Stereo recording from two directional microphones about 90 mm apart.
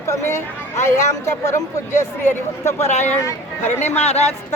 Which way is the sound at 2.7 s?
30° left (ahead or behind).